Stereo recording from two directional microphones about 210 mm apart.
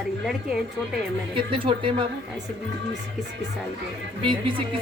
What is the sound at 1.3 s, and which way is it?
Speech, 25° right (ahead or behind).